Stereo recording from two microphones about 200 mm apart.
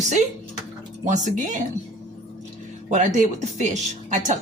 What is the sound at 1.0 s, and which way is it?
Speech, 40° right (ahead or behind).